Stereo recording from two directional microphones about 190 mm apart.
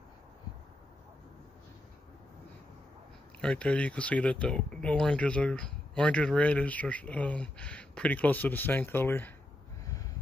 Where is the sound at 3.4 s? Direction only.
5° left (ahead or behind).